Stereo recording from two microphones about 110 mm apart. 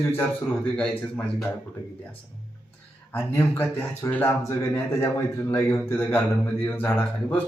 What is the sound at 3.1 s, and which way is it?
Speech, 20° left (ahead or behind).